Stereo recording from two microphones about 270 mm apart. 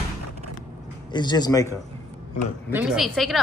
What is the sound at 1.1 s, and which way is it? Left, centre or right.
Speech, centre.